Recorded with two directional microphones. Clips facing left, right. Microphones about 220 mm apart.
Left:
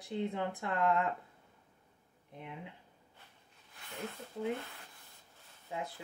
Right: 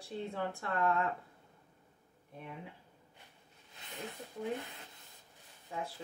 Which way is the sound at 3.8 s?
20° right (ahead or behind).